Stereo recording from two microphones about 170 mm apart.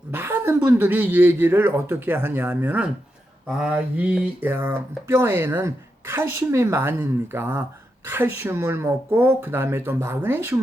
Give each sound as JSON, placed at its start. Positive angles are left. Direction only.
{"t": 0.1, "sound": "speech", "side_deg": -10}